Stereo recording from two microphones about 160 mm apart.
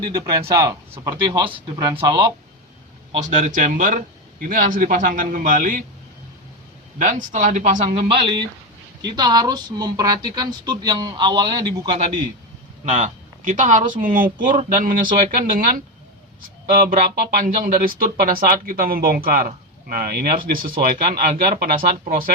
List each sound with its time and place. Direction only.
0.0 s speech: 25° right (ahead or behind)
1.3 s speech: 30° right (ahead or behind)
3.2 s speech: 50° right (ahead or behind)
7.0 s speech: 50° right (ahead or behind); by 11.9 s 25° right (ahead or behind)
12.8 s speech: 50° right (ahead or behind)